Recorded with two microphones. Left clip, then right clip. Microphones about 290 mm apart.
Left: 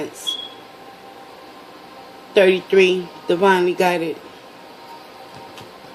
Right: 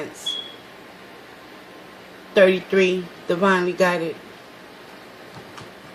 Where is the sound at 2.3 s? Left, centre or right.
Centre.